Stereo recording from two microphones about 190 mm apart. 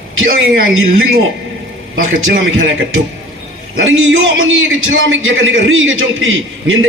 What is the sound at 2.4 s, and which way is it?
Speech, 90° right.